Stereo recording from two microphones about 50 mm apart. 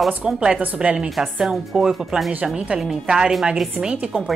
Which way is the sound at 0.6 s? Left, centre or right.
Right.